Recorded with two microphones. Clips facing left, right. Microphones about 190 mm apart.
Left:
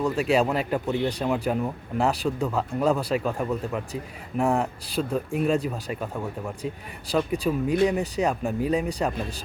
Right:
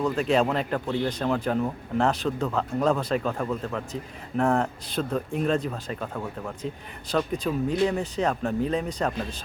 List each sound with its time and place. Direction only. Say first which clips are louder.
0.0 s speech: left 1 dB; 10° left (ahead or behind)